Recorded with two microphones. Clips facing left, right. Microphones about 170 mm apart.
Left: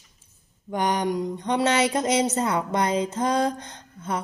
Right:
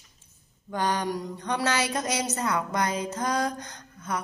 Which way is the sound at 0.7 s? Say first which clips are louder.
Left 4 dB; 20° left (ahead or behind).